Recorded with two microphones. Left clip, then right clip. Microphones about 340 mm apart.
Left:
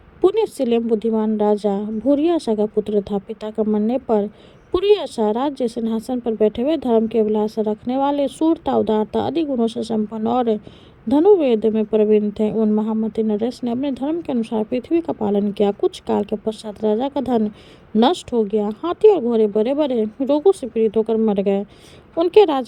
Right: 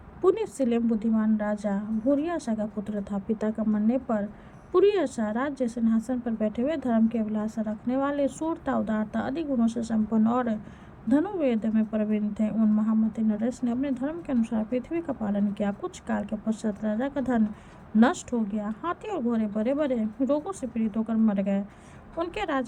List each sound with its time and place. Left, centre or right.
0.2 s a woman's voice: centre